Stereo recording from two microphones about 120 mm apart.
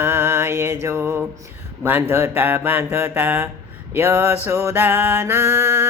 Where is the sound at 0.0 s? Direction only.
20° right (ahead or behind).